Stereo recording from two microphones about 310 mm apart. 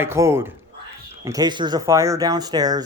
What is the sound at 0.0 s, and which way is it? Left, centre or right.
Speech, centre.